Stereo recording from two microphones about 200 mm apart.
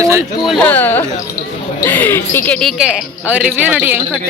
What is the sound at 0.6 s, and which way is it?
Speech, 10° left (ahead or behind).